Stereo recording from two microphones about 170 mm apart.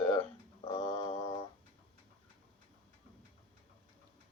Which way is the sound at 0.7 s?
35° left (ahead or behind).